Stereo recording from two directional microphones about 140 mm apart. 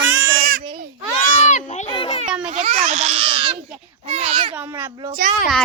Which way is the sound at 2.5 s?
55° right (ahead or behind).